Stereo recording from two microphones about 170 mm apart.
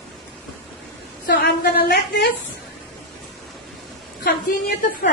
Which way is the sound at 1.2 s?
70° left (ahead or behind).